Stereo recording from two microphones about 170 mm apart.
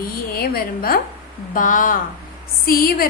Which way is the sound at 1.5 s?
50° left (ahead or behind).